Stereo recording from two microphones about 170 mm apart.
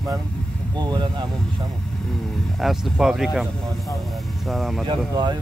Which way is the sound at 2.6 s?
Centre (ahead or behind).